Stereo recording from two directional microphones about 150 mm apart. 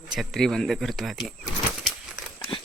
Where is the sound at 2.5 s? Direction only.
35° left (ahead or behind).